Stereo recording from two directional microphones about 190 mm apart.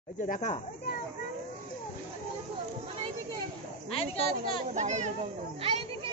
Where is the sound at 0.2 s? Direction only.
40° left (ahead or behind).